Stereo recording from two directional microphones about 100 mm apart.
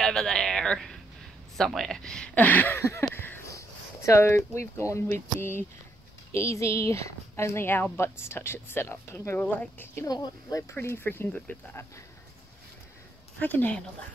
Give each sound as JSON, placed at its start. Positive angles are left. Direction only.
{"t": 0.0, "sound": "speech", "side_deg": 5}
{"t": 10.1, "sound": "speech", "side_deg": 45}
{"t": 10.7, "sound": "speech", "side_deg": 25}
{"t": 13.4, "sound": "speech", "side_deg": 15}